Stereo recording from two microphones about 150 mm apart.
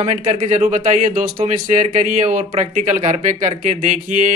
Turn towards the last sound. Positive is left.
turn(degrees=-55)  # may be behind; listen again after turning